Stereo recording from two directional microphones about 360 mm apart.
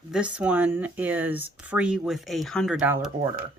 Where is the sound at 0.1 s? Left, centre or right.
Centre.